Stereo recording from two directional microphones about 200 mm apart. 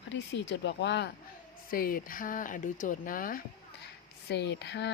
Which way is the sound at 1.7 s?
45° left (ahead or behind).